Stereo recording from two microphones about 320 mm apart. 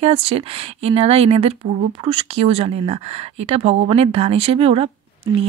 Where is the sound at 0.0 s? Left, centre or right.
Centre.